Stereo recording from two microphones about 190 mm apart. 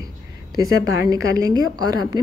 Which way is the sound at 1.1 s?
20° right (ahead or behind).